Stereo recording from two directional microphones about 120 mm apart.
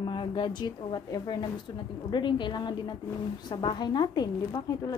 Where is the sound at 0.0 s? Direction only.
40° left (ahead or behind).